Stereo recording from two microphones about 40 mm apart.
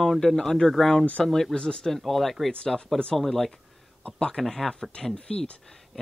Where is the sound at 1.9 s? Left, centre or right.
Centre.